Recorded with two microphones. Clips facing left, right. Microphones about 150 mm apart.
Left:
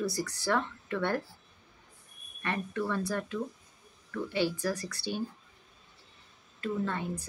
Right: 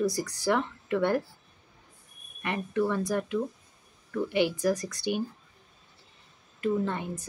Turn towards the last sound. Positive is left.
turn(degrees=-20)  # may be behind; listen again after turning